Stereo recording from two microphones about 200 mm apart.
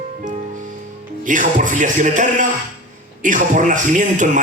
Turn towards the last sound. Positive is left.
turn(degrees=-40)  # may be behind; listen again after turning